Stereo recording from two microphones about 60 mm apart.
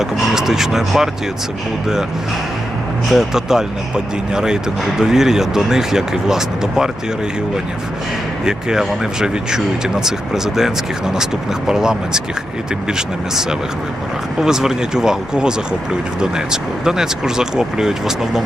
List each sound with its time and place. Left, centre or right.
0.0 s speech: centre
3.1 s speech: centre
8.4 s speech: centre